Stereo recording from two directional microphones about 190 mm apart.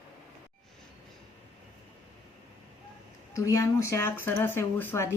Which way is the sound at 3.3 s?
20° left (ahead or behind).